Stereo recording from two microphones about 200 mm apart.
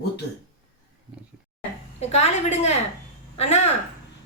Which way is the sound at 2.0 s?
30° left (ahead or behind).